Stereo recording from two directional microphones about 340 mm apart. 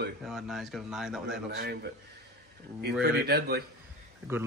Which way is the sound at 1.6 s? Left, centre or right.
Right.